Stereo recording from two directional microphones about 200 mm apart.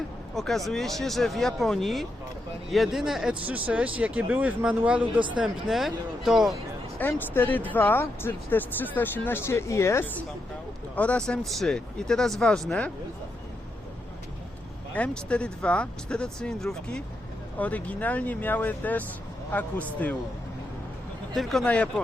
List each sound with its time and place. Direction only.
0.3 s speech: centre (ahead or behind)
7.0 s speech: 10° left (ahead or behind)
14.9 s speech: 5° left (ahead or behind)
21.3 s speech: centre (ahead or behind)